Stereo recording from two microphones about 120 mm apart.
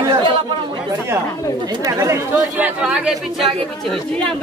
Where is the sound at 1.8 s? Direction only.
30° right (ahead or behind).